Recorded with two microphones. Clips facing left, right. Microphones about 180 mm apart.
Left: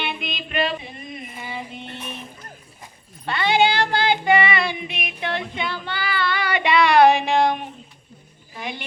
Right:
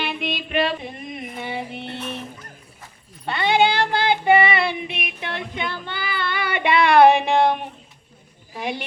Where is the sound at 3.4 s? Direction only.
55° right (ahead or behind).